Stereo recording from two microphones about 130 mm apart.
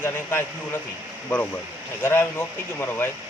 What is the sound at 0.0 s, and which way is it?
Speech, 20° left (ahead or behind).